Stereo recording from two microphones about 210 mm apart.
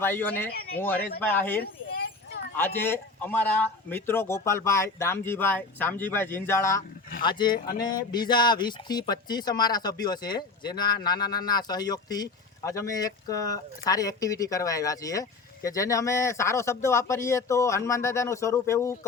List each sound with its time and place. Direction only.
0.0 s speech: 10° left (ahead or behind)
1.6 s a sound: 45° left (ahead or behind)
2.6 s speech: 10° left (ahead or behind)